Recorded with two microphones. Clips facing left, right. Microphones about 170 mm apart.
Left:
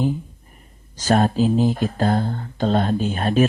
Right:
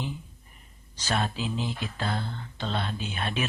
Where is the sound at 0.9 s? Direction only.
45° left (ahead or behind).